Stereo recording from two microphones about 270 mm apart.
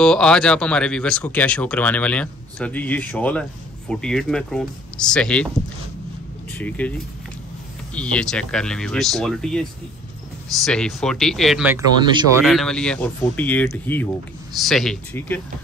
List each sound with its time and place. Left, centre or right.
0.0 s speech: centre
6.6 s speech: centre
12.0 s speech: centre
12.4 s speech: centre